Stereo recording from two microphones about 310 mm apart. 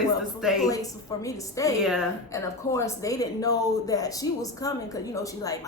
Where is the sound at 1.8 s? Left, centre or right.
Centre.